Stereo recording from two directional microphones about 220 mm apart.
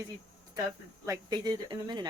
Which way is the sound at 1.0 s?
15° right (ahead or behind).